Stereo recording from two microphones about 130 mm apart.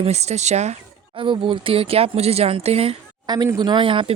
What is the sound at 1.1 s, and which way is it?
Speech, 40° right (ahead or behind).